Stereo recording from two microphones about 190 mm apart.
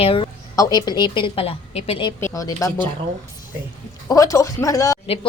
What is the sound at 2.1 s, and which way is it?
Speech, 15° left (ahead or behind).